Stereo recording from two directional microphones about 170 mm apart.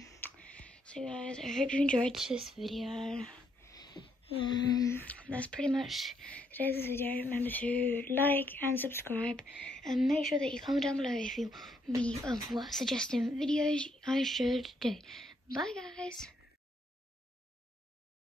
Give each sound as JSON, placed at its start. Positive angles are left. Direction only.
{"t": 0.2, "sound": "a woman's voice", "side_deg": 5}
{"t": 3.7, "sound": "a sound", "side_deg": 25}
{"t": 4.8, "sound": "speech", "side_deg": 10}
{"t": 6.5, "sound": "a woman's voice", "side_deg": 10}